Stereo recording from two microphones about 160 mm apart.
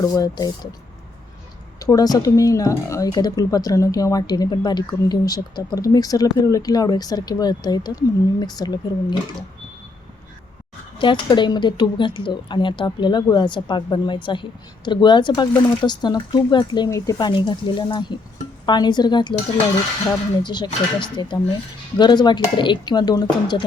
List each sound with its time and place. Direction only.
0.0 s a woman's voice: 20° left (ahead or behind)
1.8 s a woman's voice: 25° left (ahead or behind)
10.9 s a woman's voice: 30° left (ahead or behind)